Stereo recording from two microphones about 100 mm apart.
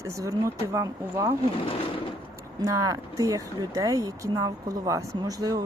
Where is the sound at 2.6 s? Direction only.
35° right (ahead or behind).